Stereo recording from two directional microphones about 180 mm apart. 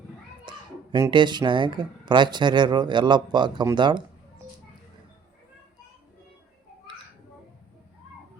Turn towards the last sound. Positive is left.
turn(degrees=-25)  # may be behind; listen again after turning